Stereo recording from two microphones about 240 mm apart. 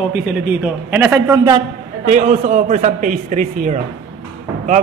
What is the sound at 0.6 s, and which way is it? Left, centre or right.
Speech, centre.